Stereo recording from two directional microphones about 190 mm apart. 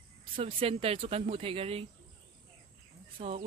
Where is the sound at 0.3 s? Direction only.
30° right (ahead or behind).